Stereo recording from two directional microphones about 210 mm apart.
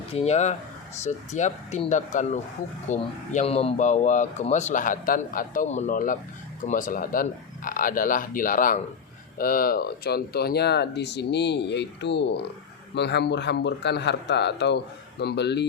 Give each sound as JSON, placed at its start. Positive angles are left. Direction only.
{"t": 0.1, "sound": "speech", "side_deg": 30}